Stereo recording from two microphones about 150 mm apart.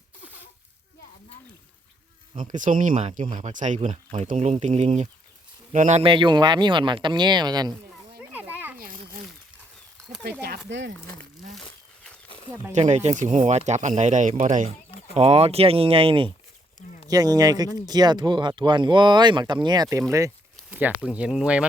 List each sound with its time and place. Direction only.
2.4 s speech: 60° right (ahead or behind)
6.0 s speech: 35° right (ahead or behind)
8.2 s a sound: 10° right (ahead or behind)
8.8 s a sound: 70° right (ahead or behind)
12.7 s speech: 50° right (ahead or behind)
15.1 s speech: 45° right (ahead or behind)
17.1 s speech: 25° right (ahead or behind); by 21.7 s 5° right (ahead or behind)